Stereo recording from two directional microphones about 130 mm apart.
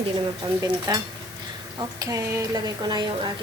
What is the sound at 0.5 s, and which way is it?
Speech, 25° right (ahead or behind).